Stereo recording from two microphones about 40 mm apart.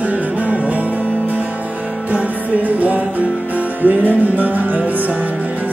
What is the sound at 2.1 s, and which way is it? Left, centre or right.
Music, right.